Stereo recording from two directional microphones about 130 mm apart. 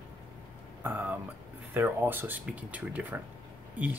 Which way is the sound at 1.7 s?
15° right (ahead or behind).